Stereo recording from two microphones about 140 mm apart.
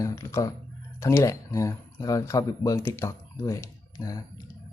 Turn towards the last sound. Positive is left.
turn(degrees=25)  # may be behind; listen again after turning